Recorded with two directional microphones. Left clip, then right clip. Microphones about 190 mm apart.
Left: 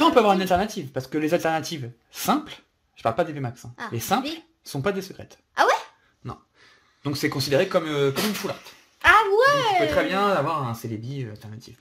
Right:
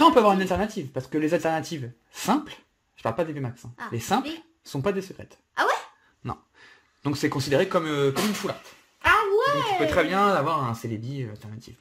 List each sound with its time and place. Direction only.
0.0 s speech: 10° right (ahead or behind)
5.5 s dog: 30° left (ahead or behind)
6.2 s a sound: 25° right (ahead or behind)
7.1 s speech: 10° right (ahead or behind)
9.0 s a sound: 40° left (ahead or behind)
9.8 s speech: 25° right (ahead or behind)